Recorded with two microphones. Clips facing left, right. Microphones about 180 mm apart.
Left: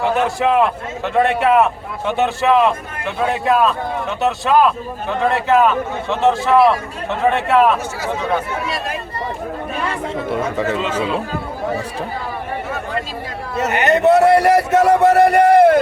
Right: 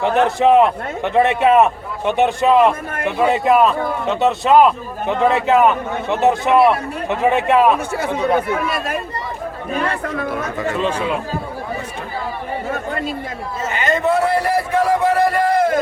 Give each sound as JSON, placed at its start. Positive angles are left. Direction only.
{"t": 0.3, "sound": "a man's voice", "side_deg": -20}
{"t": 8.6, "sound": "speech", "side_deg": -55}
{"t": 13.6, "sound": "a man's voice", "side_deg": 70}